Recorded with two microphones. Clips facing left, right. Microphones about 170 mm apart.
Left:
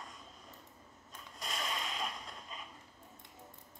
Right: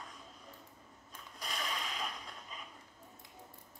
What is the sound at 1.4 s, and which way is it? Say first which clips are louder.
Whip: left 1 dB; centre (ahead or behind).